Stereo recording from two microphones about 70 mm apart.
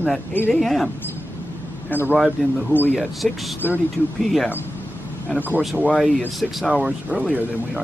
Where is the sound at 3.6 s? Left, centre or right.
Left.